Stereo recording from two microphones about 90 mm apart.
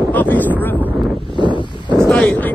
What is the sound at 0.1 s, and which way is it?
Speech, 20° left (ahead or behind).